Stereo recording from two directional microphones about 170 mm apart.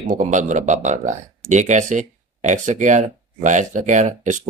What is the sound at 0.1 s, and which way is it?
Speech, 45° right (ahead or behind).